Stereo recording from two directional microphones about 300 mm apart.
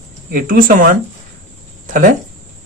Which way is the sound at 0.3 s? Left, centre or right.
Right.